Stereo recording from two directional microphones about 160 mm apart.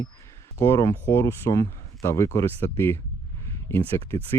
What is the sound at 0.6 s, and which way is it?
Speech, 20° left (ahead or behind).